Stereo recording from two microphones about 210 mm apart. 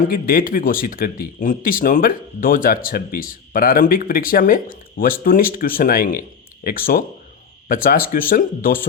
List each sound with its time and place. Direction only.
0.0 s speech: 45° left (ahead or behind)